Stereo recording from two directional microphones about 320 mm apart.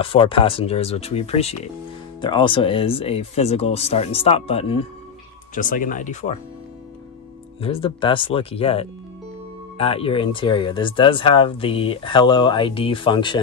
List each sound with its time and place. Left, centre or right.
0.0 s speech: centre
7.6 s speech: centre